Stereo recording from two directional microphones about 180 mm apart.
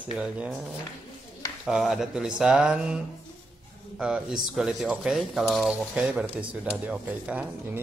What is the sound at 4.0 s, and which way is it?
Speech, 5° right (ahead or behind).